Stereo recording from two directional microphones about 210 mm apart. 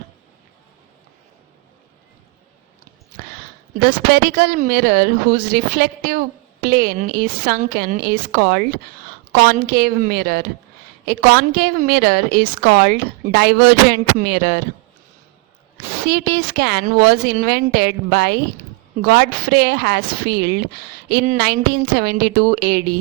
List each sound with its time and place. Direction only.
3.8 s a woman's voice: 45° right (ahead or behind)
16.0 s a woman's voice: 45° right (ahead or behind)